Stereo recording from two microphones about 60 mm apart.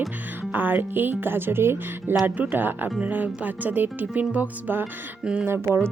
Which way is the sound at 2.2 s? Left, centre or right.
Right.